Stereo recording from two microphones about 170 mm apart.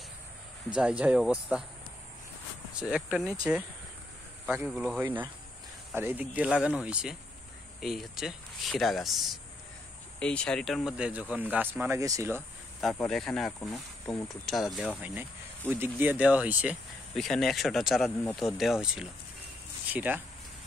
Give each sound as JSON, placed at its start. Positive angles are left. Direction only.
{"t": 0.7, "sound": "speech", "side_deg": -5}
{"t": 2.7, "sound": "speech", "side_deg": -5}
{"t": 4.6, "sound": "speech", "side_deg": -5}
{"t": 12.9, "sound": "speech", "side_deg": 5}
{"t": 14.0, "sound": "speech", "side_deg": 20}
{"t": 14.4, "sound": "speech", "side_deg": 0}